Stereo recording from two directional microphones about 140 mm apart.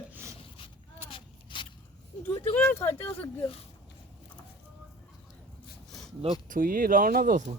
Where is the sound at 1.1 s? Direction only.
35° left (ahead or behind).